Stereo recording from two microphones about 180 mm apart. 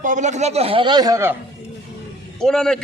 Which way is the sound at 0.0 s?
45° right (ahead or behind).